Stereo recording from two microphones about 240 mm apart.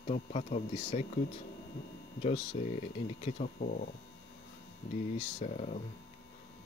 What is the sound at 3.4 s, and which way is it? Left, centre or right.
Speech, left.